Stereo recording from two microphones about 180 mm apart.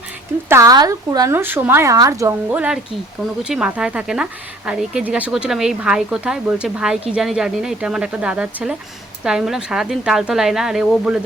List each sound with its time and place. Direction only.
0.4 s a woman's voice: 15° right (ahead or behind)